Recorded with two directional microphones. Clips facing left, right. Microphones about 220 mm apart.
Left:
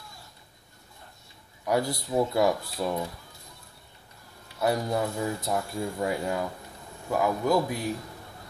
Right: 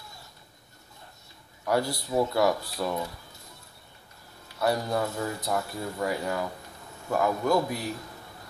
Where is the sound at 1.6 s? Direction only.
20° left (ahead or behind).